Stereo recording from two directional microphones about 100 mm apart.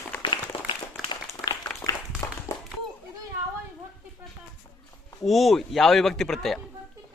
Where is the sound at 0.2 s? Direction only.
55° left (ahead or behind).